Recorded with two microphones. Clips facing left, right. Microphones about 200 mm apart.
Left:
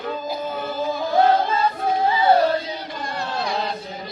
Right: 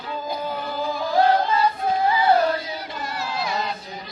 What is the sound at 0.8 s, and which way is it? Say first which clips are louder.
Singing: left 1 dB; 25° left (ahead or behind).